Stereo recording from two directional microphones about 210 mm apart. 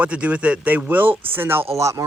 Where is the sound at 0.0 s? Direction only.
5° right (ahead or behind).